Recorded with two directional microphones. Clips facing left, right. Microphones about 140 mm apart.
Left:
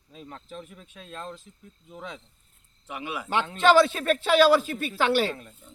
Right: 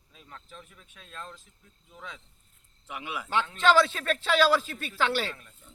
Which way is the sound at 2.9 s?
Centre (ahead or behind).